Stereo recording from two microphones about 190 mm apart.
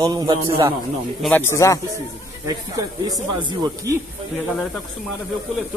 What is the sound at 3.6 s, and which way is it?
Speech, 15° right (ahead or behind).